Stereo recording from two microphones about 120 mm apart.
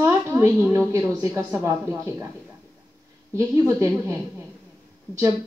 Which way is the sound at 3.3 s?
25° right (ahead or behind).